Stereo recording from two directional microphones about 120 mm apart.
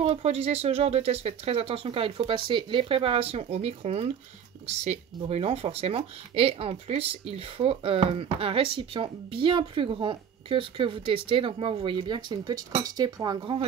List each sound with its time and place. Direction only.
0.0 s speech: 60° right (ahead or behind); by 13.6 s 40° right (ahead or behind)